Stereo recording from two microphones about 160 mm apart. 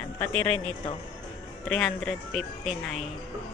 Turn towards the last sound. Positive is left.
turn(degrees=0)  # may be behind; listen again after turning